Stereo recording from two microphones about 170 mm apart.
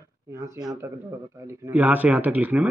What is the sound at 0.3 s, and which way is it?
Speech, 15° right (ahead or behind).